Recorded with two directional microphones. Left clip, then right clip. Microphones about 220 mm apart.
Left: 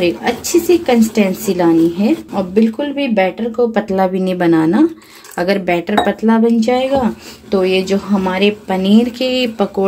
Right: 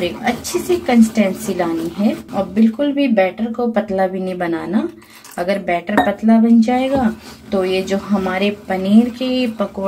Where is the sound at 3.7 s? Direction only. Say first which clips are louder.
Left 2 dB; 45° left (ahead or behind).